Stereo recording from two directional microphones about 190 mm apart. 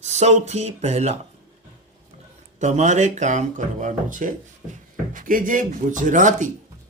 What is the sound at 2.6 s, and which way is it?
Speech, 40° right (ahead or behind).